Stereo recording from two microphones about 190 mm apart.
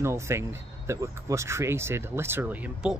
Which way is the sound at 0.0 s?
15° right (ahead or behind).